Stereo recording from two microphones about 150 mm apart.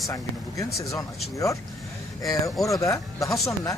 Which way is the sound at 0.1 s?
20° left (ahead or behind).